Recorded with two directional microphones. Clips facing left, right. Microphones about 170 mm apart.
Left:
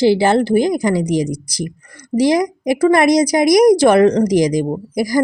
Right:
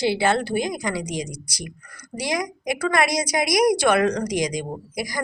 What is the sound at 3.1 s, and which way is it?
A woman's voice, 30° left (ahead or behind).